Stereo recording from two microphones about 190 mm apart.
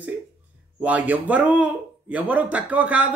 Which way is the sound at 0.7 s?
10° right (ahead or behind).